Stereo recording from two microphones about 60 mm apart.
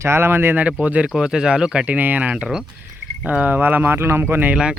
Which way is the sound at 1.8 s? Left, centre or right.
Right.